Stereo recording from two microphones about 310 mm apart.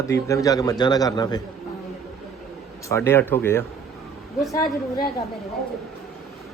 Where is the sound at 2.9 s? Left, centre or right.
Centre.